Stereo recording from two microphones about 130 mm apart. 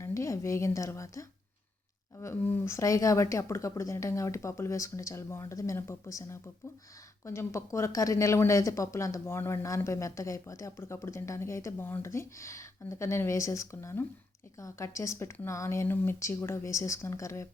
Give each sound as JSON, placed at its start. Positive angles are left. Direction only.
{"t": 0.0, "sound": "speech", "side_deg": 25}
{"t": 2.2, "sound": "speech", "side_deg": 15}